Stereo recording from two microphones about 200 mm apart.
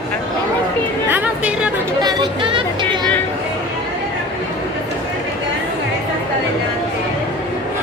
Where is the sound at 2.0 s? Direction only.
20° right (ahead or behind).